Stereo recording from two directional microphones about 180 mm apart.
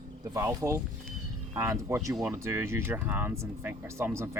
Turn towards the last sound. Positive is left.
turn(degrees=-15)  # may be behind; listen again after turning